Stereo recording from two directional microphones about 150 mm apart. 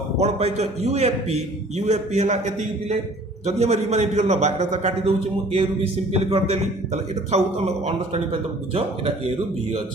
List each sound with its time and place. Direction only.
0.2 s a man's voice: 45° right (ahead or behind)